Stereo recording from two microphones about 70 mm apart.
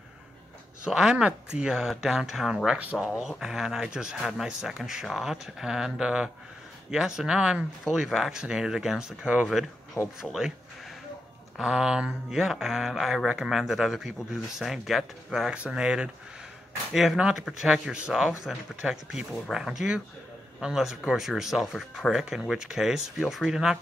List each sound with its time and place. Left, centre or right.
0.8 s speech: centre
3.1 s speech: centre
10.2 s speech: centre
11.5 s speech: centre
15.5 s speech: centre